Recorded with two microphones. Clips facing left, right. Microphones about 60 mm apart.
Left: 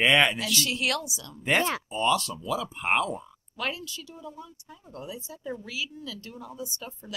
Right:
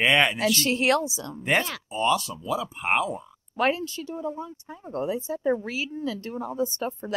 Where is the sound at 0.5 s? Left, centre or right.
Right.